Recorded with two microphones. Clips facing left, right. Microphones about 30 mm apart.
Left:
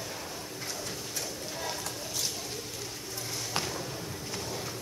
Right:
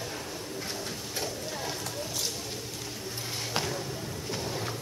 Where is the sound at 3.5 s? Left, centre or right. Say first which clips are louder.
Right 2 dB; centre.